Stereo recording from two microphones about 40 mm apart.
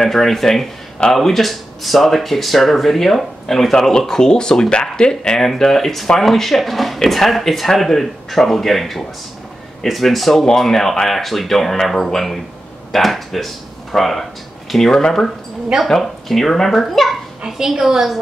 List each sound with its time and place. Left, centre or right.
0.0 s speech: centre
5.4 s speech: centre
15.9 s speech: centre
17.5 s a woman's voice: centre